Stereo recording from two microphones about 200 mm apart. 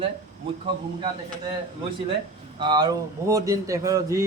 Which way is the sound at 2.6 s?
20° right (ahead or behind).